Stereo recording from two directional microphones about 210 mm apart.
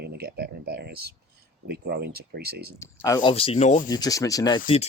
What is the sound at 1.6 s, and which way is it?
Speech, 50° right (ahead or behind).